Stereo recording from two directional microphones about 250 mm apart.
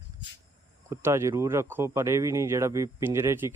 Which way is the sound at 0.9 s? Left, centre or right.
Centre.